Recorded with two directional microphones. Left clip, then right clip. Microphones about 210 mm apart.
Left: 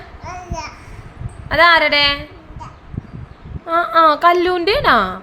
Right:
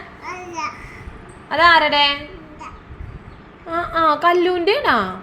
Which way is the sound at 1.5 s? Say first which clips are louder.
Left 2 dB; 20° left (ahead or behind).